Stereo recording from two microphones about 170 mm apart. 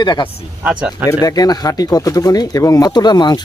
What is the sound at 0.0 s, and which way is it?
Speech, 25° left (ahead or behind).